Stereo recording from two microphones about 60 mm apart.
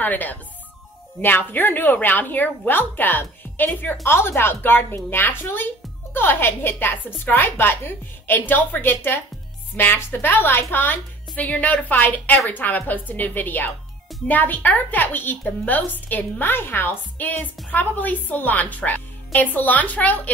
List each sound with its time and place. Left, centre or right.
0.0 s a woman's voice: left
4.0 s a woman's voice: left